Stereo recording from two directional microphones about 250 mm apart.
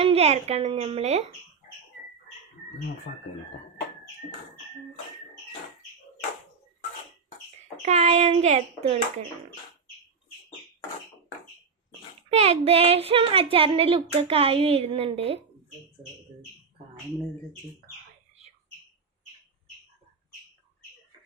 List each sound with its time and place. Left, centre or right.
0.0 s speech: right
7.9 s speech: right
12.3 s speech: right